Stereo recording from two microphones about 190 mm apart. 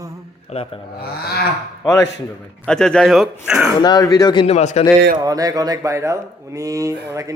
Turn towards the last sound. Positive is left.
turn(degrees=-15)  # may be behind; listen again after turning